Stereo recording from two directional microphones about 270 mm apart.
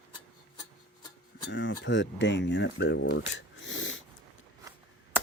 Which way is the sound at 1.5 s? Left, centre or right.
Left.